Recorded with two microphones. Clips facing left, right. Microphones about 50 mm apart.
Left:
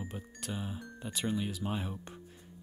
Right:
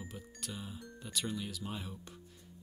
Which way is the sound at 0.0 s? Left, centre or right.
Left.